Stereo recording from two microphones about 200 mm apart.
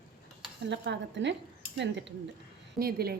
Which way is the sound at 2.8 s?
50° right (ahead or behind).